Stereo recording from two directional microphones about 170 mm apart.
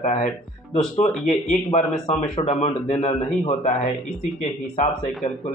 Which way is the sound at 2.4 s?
30° left (ahead or behind).